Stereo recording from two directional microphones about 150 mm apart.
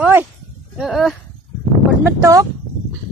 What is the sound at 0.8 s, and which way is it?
Speech, centre (ahead or behind).